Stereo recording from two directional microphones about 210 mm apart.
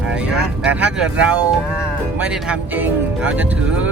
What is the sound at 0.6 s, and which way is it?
Speech, 5° right (ahead or behind).